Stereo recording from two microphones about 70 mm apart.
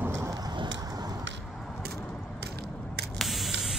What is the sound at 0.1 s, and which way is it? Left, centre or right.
Rain, right.